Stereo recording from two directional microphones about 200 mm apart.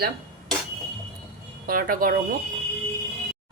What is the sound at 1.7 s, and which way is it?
Speech, 45° right (ahead or behind).